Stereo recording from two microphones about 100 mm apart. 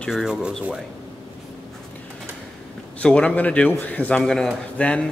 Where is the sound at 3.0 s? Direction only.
10° left (ahead or behind).